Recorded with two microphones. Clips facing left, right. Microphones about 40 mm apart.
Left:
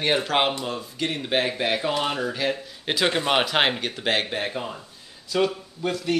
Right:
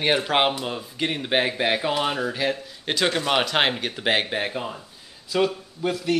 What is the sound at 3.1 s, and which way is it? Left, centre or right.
Speech, centre.